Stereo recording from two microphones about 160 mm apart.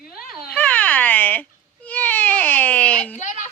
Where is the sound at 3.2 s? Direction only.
50° left (ahead or behind).